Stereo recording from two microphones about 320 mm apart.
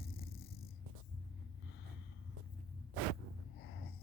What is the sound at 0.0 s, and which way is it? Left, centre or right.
Purr, left.